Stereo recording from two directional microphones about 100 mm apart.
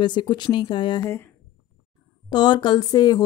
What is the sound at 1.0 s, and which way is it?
Speech, 25° left (ahead or behind).